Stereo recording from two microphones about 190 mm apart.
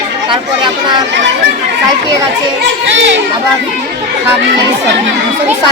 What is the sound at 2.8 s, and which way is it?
Speech, 75° right (ahead or behind).